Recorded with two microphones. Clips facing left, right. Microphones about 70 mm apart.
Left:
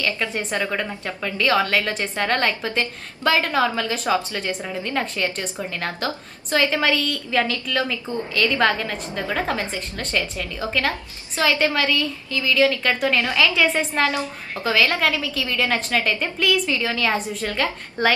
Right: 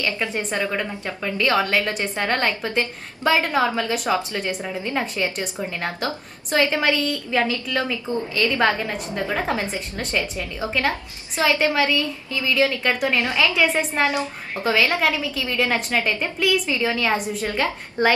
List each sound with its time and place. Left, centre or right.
0.3 s a woman's voice: centre